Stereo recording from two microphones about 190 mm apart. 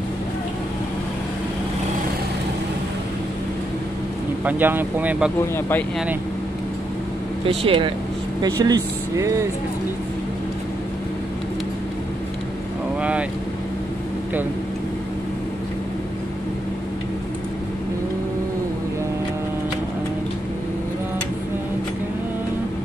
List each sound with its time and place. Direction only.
4.5 s speech: 10° right (ahead or behind)
7.4 s speech: 30° right (ahead or behind)
8.6 s speech: 20° right (ahead or behind)